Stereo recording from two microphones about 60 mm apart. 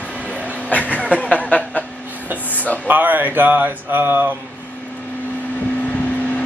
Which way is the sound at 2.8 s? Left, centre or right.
Right.